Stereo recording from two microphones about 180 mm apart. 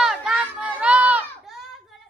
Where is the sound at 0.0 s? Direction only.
5° right (ahead or behind).